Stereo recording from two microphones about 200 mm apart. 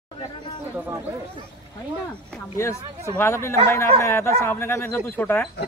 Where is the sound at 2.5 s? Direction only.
15° left (ahead or behind).